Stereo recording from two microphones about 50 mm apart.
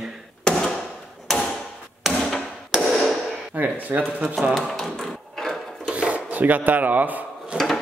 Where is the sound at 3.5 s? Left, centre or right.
Right.